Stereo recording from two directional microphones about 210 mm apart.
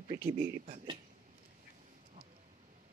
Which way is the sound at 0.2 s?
40° right (ahead or behind).